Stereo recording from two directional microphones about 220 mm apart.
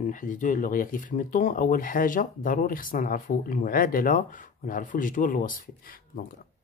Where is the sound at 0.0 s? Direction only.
35° left (ahead or behind).